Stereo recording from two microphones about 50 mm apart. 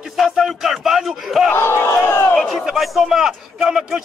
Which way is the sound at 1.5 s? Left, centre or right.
Left.